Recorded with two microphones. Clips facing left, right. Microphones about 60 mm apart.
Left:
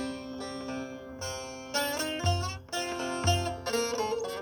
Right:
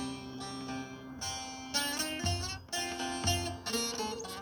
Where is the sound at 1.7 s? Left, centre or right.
Left.